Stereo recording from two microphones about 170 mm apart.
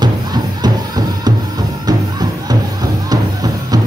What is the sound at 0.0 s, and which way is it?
Music, 25° right (ahead or behind).